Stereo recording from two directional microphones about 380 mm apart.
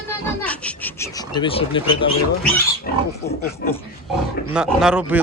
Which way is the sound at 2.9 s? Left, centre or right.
Left.